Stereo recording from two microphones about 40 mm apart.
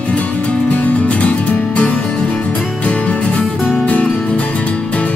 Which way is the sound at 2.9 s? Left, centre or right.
Left.